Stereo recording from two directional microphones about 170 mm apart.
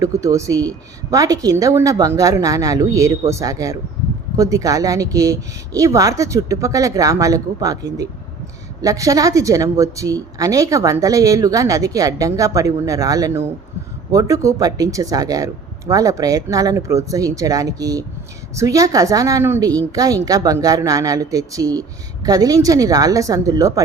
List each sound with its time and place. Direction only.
0.0 s a woman's voice: 20° right (ahead or behind)